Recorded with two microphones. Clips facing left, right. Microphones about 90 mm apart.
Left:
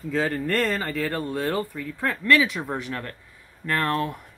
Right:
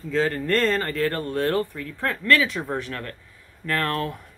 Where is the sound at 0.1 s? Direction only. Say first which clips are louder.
Right 2 dB; 10° left (ahead or behind).